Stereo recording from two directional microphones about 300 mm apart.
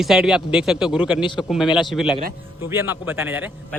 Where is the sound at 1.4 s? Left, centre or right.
Centre.